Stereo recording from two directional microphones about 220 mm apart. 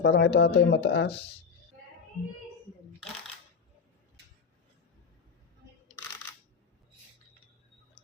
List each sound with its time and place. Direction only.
0.0 s speech: 50° left (ahead or behind)